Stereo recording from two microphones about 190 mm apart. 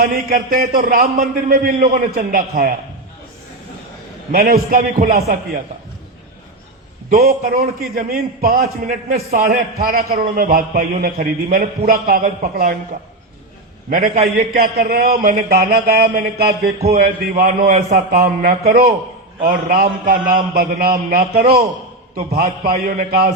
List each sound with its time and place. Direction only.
0.0 s a man's voice: 50° right (ahead or behind)
4.3 s a man's voice: 50° right (ahead or behind)
7.1 s a man's voice: 50° right (ahead or behind)
14.3 s a man's voice: 55° right (ahead or behind)